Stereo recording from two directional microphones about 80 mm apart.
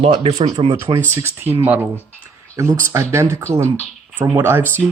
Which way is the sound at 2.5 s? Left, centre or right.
Right.